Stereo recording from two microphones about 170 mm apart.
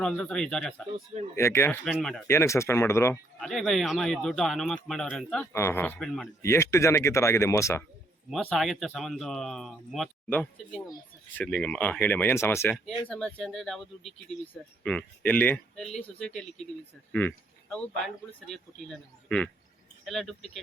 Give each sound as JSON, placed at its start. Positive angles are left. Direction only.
{"t": 0.0, "sound": "speech", "side_deg": 5}
{"t": 1.4, "sound": "speech", "side_deg": 15}
{"t": 1.8, "sound": "speech", "side_deg": 5}
{"t": 2.2, "sound": "speech", "side_deg": 15}
{"t": 3.4, "sound": "speech", "side_deg": 0}
{"t": 5.5, "sound": "speech", "side_deg": 15}
{"t": 8.3, "sound": "speech", "side_deg": 5}
{"t": 13.1, "sound": "speech", "side_deg": 5}